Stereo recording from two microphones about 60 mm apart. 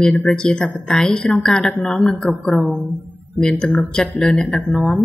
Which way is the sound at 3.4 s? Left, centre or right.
Centre.